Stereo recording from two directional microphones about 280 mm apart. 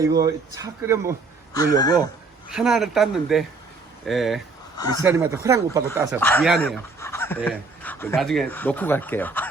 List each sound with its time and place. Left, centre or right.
0.3 s speech: centre
1.5 s speech: centre
2.5 s speech: centre
4.8 s speech: centre
5.0 s speech: centre
6.1 s speech: centre